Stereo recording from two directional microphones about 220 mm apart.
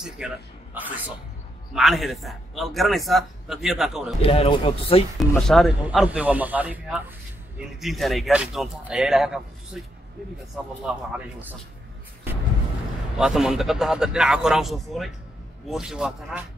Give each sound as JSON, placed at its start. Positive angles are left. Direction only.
{"t": 0.2, "sound": "a man's voice", "side_deg": -5}
{"t": 4.2, "sound": "speech", "side_deg": 25}
{"t": 5.3, "sound": "a man's voice", "side_deg": 0}
{"t": 13.2, "sound": "a man's voice", "side_deg": 0}